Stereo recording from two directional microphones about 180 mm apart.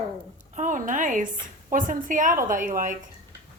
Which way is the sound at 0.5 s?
45° right (ahead or behind).